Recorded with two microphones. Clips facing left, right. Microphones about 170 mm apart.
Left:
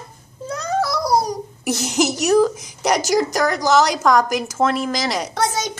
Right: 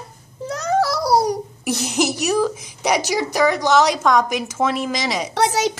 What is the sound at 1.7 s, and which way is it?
A woman's voice, centre (ahead or behind).